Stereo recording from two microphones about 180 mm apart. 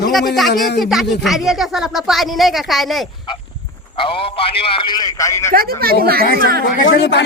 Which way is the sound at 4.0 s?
30° left (ahead or behind).